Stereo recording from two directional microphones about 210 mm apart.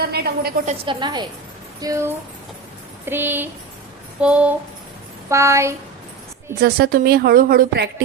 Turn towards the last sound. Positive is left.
turn(degrees=-50)  # may be behind; listen again after turning